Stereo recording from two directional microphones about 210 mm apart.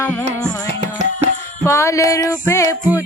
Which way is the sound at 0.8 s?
35° right (ahead or behind).